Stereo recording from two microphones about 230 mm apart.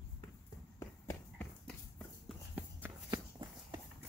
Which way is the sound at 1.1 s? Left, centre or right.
Centre.